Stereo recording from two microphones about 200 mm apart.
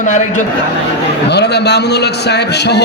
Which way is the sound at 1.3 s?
55° left (ahead or behind).